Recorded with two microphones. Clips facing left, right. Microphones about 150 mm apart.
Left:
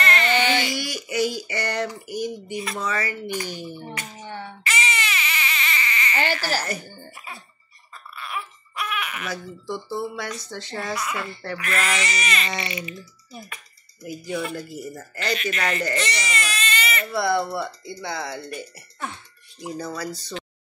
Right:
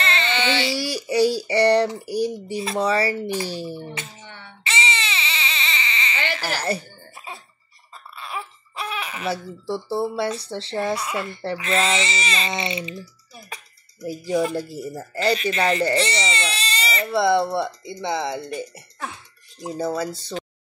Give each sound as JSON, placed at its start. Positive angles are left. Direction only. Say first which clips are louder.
{"t": 0.0, "sound": "a sound", "louder": "left 2 dB", "side_deg": -30}
{"t": 4.6, "sound": "baby cry", "louder": "right 1 dB", "side_deg": -25}
{"t": 6.6, "sound": "a sound", "louder": "right 5 dB", "side_deg": -30}
{"t": 7.9, "sound": "speech", "louder": "even", "side_deg": -30}
{"t": 14.0, "sound": "speech", "louder": "right 6 dB", "side_deg": -35}
{"t": 17.0, "sound": "speech", "louder": "right 5 dB", "side_deg": -20}
{"t": 20.0, "sound": "speech", "louder": "right 4 dB", "side_deg": -25}